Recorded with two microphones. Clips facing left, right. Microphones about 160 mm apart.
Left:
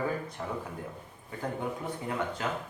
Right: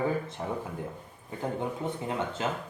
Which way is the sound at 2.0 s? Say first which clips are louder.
Even; 25° right (ahead or behind).